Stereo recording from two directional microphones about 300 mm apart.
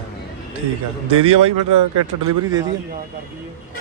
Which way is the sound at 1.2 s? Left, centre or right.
Right.